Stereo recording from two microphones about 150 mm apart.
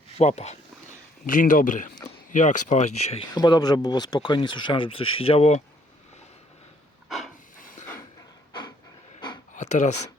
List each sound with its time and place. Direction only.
0.2 s speech: 45° left (ahead or behind)
1.3 s a man's voice: 65° left (ahead or behind); by 3.2 s 45° left (ahead or behind)
3.3 s speech: 25° left (ahead or behind); by 5.6 s 45° left (ahead or behind)
7.1 s hiss: centre (ahead or behind)
7.6 s a sound: 65° left (ahead or behind)
9.6 s speech: 50° left (ahead or behind)